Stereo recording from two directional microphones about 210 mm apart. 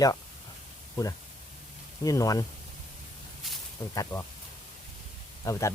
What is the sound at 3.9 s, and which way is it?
Speech, 15° left (ahead or behind).